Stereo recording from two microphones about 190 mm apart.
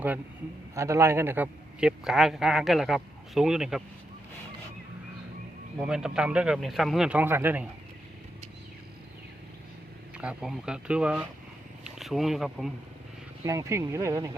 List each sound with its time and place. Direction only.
0.8 s a man's voice: 15° right (ahead or behind)
5.8 s a man's voice: 5° right (ahead or behind)
10.2 s a man's voice: 5° right (ahead or behind)
13.4 s speech: 15° right (ahead or behind)